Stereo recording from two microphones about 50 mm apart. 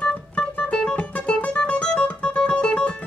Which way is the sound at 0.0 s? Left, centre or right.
Left.